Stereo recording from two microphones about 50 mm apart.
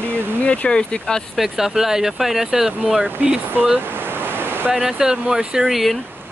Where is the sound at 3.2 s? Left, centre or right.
Right.